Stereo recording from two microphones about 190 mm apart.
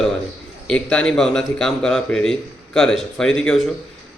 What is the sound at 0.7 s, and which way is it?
A man's voice, 5° left (ahead or behind).